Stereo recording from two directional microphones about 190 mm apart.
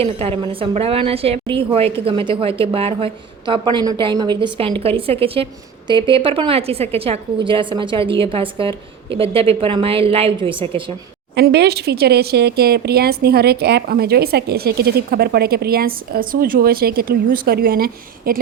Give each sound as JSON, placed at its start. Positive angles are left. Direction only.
{"t": 0.0, "sound": "a woman's voice", "side_deg": -30}
{"t": 11.3, "sound": "speech", "side_deg": -60}